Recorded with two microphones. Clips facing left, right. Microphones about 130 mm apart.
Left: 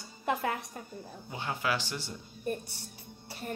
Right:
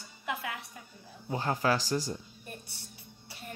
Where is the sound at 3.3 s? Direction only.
45° left (ahead or behind).